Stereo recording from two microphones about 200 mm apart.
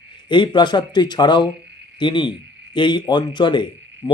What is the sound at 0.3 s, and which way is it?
Speech, 25° left (ahead or behind).